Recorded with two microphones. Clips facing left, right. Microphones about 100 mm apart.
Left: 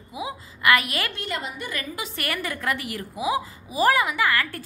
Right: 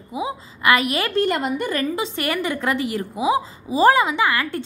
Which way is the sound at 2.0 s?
25° right (ahead or behind).